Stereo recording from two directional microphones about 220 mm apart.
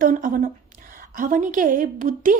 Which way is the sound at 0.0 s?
35° right (ahead or behind).